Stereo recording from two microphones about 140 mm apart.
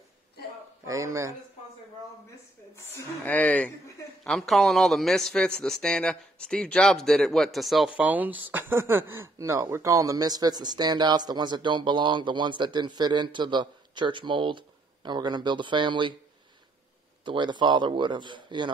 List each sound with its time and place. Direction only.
0.8 s a man's voice: 20° right (ahead or behind)
3.3 s speech: 10° left (ahead or behind); by 16.2 s 35° right (ahead or behind)
17.2 s speech: 35° right (ahead or behind)